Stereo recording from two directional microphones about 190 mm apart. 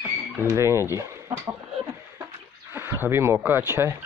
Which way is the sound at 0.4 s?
15° right (ahead or behind).